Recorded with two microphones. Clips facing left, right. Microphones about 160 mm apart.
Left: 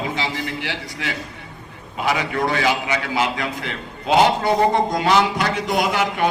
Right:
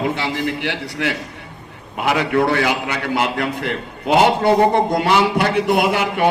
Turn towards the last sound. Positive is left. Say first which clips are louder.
# right 3 dB
turn(degrees=-55)  # may be behind; listen again after turning